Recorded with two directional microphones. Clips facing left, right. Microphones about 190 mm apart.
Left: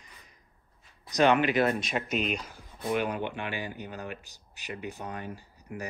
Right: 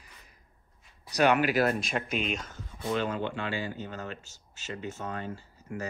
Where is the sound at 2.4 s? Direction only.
15° left (ahead or behind).